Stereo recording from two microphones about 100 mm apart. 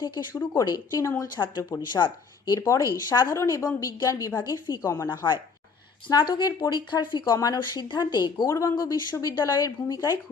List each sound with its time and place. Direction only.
0.0 s speech: 45° left (ahead or behind)
0.7 s speech: 35° left (ahead or behind)
1.4 s speech: 20° left (ahead or behind)
1.8 s speech: 50° left (ahead or behind)
2.6 s speech: 30° left (ahead or behind)
3.3 s speech: 30° left (ahead or behind); by 8.4 s 45° left (ahead or behind)
8.4 s speech: 30° left (ahead or behind)